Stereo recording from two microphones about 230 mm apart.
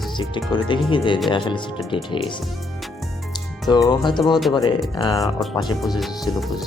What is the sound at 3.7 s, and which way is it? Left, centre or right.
Speech, centre.